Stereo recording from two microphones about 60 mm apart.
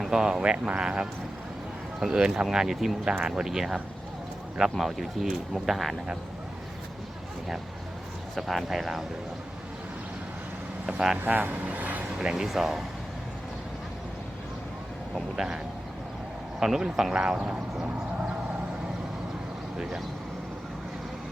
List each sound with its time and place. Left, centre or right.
0.0 s speech: centre
4.8 s speech: centre
8.4 s speech: centre
11.2 s speech: right
12.1 s speech: centre
12.5 s speech: centre
15.1 s speech: centre
16.6 s speech: centre
17.3 s speech: right